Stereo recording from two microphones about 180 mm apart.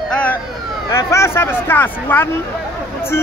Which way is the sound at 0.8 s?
15° left (ahead or behind).